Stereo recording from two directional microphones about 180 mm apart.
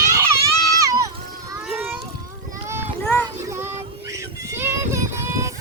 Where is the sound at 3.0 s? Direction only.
10° left (ahead or behind).